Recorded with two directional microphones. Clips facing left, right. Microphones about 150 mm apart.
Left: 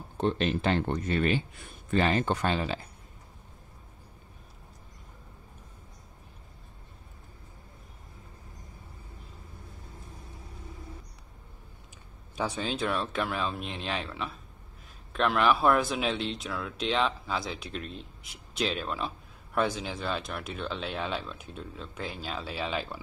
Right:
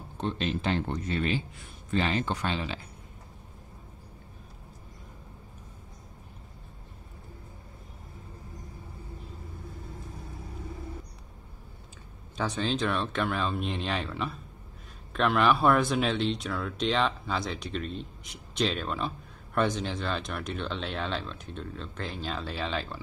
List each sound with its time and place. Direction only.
0.2 s speech: 60° left (ahead or behind)
12.4 s speech: 10° left (ahead or behind)